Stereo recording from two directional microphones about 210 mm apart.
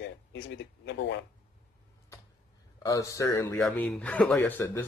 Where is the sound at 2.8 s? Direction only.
15° left (ahead or behind).